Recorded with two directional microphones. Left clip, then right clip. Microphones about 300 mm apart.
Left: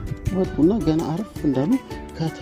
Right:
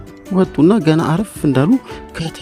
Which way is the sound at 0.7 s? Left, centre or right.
Right.